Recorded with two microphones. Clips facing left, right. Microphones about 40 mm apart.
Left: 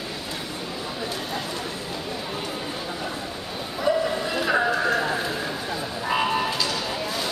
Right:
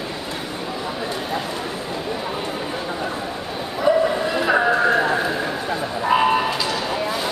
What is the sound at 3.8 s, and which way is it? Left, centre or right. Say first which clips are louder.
Bow-wow: right 5 dB; centre.